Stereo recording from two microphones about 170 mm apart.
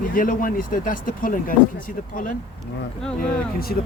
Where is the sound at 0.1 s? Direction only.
55° left (ahead or behind).